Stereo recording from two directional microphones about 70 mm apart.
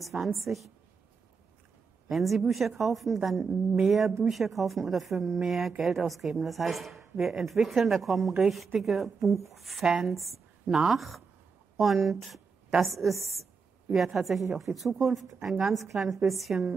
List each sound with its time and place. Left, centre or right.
0.0 s speech: centre
2.0 s a woman's voice: centre